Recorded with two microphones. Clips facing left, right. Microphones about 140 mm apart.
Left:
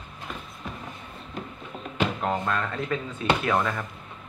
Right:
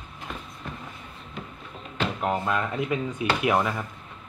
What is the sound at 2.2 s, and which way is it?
Speech, 10° right (ahead or behind).